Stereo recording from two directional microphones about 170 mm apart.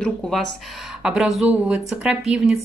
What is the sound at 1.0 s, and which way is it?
Speech, 5° right (ahead or behind).